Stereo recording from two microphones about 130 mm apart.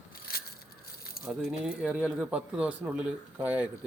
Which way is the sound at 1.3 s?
5° right (ahead or behind).